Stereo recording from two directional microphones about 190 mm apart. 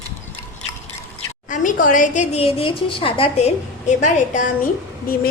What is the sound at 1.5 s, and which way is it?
A woman's voice, 45° left (ahead or behind).